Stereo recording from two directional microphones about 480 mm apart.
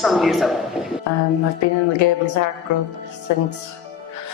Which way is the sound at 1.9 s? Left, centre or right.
Left.